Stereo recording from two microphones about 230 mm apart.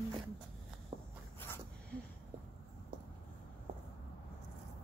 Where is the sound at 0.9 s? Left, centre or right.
Right.